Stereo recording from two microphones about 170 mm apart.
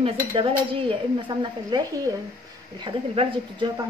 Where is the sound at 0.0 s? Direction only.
30° right (ahead or behind).